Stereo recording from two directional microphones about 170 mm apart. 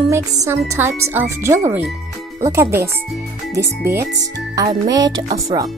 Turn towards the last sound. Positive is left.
turn(degrees=-25)  # may be behind; listen again after turning